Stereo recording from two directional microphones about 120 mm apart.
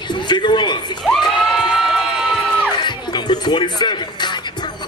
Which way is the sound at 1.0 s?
Centre (ahead or behind).